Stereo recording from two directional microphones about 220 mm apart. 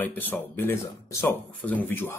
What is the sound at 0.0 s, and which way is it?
Speech, 10° left (ahead or behind).